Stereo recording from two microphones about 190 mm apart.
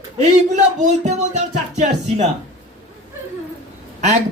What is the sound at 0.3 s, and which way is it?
Speech, 40° right (ahead or behind).